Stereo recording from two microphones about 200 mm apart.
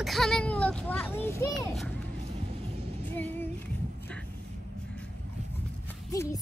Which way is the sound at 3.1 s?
10° left (ahead or behind).